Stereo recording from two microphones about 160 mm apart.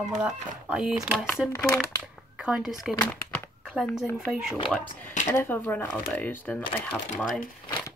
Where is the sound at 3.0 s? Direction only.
10° left (ahead or behind).